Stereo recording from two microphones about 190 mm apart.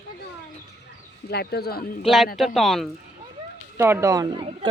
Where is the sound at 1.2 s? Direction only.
55° left (ahead or behind).